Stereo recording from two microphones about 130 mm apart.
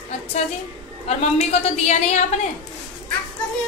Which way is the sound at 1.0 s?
55° left (ahead or behind).